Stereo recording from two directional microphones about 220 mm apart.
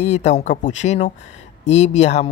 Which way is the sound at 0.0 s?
30° left (ahead or behind).